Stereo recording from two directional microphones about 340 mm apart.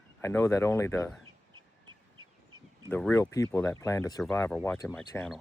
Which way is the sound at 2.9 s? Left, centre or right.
Centre.